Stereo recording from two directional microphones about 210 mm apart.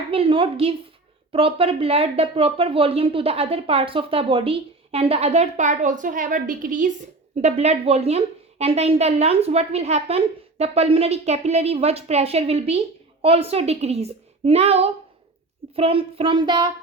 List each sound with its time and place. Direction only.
0.1 s speech: 25° right (ahead or behind)